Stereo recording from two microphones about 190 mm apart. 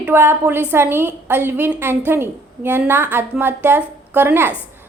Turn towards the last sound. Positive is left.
turn(degrees=-10)  # may be behind; listen again after turning